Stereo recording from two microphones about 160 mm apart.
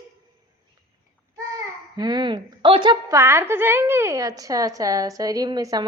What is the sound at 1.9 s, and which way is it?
A woman's voice, 25° right (ahead or behind).